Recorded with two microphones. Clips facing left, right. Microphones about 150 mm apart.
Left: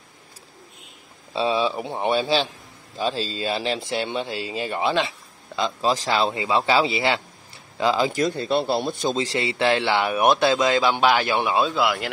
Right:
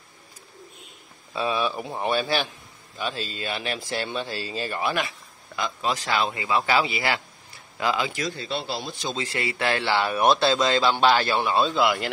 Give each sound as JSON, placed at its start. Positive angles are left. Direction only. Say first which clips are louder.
{"t": 1.3, "sound": "speech", "louder": "left 4 dB", "side_deg": 25}
{"t": 3.0, "sound": "speech", "louder": "left 5 dB", "side_deg": 30}
{"t": 8.1, "sound": "a man's voice", "louder": "left 8 dB", "side_deg": 50}
{"t": 9.4, "sound": "speech", "louder": "left 3 dB", "side_deg": 20}